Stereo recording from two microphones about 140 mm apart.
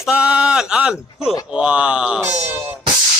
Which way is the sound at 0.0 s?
10° right (ahead or behind).